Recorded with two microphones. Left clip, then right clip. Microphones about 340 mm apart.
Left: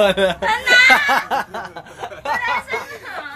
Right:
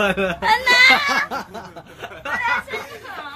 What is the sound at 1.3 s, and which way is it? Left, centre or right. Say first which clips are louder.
Snicker: left 7 dB; left.